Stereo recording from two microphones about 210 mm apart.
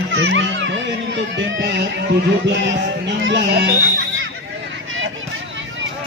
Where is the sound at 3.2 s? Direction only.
60° right (ahead or behind).